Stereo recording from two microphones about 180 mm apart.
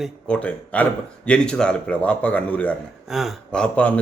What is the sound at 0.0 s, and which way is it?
A man's voice, 5° left (ahead or behind).